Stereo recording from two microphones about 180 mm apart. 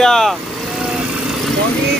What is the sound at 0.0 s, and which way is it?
Speech, 5° left (ahead or behind).